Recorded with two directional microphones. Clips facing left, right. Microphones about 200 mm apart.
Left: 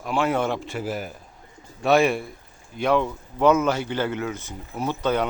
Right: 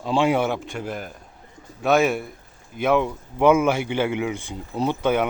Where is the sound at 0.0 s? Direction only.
25° right (ahead or behind).